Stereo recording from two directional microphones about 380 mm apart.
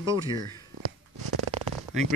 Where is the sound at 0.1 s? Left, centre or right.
Centre.